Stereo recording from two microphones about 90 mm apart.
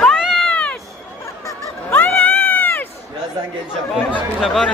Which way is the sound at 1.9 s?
20° left (ahead or behind).